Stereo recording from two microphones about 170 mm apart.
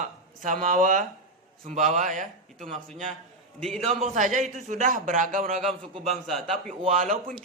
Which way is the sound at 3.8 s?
40° right (ahead or behind).